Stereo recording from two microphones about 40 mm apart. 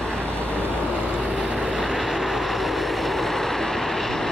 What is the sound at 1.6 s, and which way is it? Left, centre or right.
Vehicle, centre.